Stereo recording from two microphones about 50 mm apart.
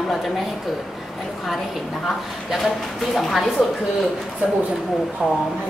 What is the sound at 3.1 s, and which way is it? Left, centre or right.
Speech, centre.